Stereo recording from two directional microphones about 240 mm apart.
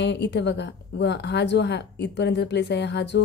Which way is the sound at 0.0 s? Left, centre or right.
Left.